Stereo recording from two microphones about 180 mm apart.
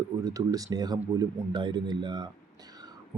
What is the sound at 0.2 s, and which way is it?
Speech, 20° right (ahead or behind).